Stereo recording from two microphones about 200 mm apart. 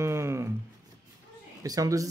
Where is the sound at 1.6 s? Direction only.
15° right (ahead or behind).